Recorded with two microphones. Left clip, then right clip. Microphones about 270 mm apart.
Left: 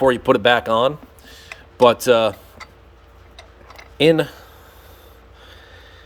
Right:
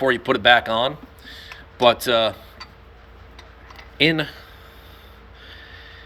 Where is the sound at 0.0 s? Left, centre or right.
Left.